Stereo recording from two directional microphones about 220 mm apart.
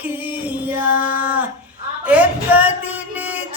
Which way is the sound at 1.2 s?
5° right (ahead or behind).